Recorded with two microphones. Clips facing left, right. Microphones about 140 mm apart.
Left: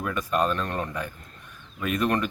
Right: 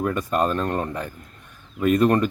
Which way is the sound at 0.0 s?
35° right (ahead or behind).